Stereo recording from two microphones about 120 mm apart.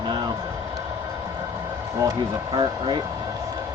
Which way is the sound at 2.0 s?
35° right (ahead or behind).